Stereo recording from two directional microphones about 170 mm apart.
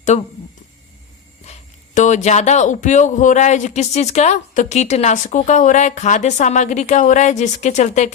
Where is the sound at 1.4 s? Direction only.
45° left (ahead or behind).